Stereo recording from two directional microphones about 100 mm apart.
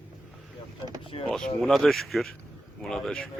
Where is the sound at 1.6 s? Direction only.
Centre (ahead or behind).